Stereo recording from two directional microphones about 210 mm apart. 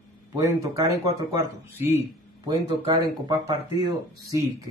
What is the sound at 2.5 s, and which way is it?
Speech, 15° right (ahead or behind).